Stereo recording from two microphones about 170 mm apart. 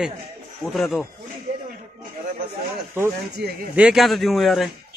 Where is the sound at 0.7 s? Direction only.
Centre (ahead or behind).